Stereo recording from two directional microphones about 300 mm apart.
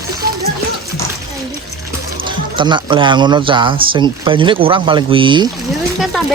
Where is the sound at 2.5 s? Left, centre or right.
Centre.